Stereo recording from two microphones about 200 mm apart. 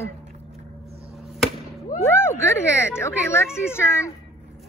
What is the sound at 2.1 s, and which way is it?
Speech, 10° left (ahead or behind).